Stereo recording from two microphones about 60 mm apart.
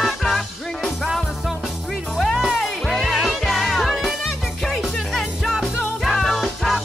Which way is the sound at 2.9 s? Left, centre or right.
Centre.